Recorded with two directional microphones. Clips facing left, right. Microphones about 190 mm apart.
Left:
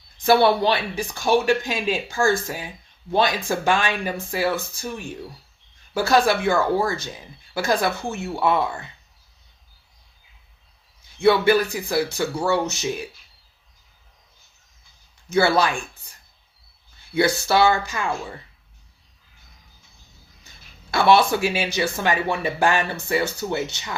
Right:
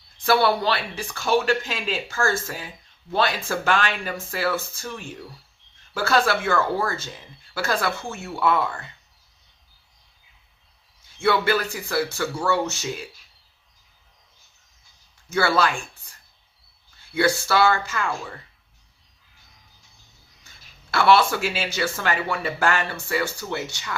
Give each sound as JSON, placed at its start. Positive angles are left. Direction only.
{"t": 0.2, "sound": "speech", "side_deg": 20}
{"t": 11.2, "sound": "speech", "side_deg": 20}
{"t": 15.3, "sound": "speech", "side_deg": 20}
{"t": 17.2, "sound": "speech", "side_deg": 20}
{"t": 20.9, "sound": "speech", "side_deg": 20}